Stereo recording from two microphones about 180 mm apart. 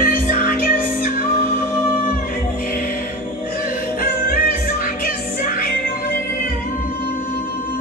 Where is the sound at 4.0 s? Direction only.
50° left (ahead or behind).